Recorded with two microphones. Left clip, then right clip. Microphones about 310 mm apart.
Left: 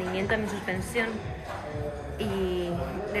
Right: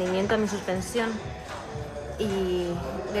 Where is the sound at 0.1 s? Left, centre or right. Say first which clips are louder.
Right 3 dB; centre.